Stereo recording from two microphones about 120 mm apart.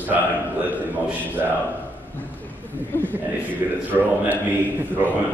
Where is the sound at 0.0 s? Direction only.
15° right (ahead or behind).